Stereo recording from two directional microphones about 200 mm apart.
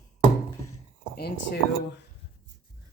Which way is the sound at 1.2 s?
50° left (ahead or behind).